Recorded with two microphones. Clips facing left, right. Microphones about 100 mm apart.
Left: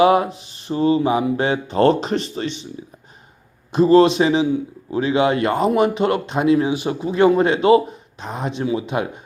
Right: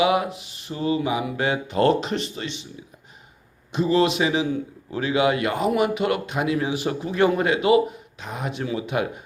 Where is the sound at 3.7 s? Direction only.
40° left (ahead or behind).